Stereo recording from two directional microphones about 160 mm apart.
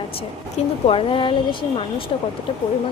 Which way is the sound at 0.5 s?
35° left (ahead or behind).